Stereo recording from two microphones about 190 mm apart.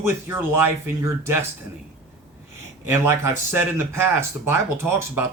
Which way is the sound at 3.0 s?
15° right (ahead or behind).